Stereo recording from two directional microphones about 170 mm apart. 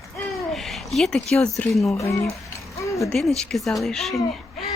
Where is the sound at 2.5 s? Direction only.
20° left (ahead or behind).